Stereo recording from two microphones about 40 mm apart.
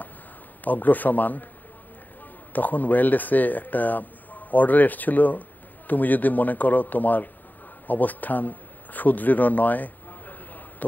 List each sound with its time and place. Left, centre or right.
0.7 s speech: left
2.5 s speech: left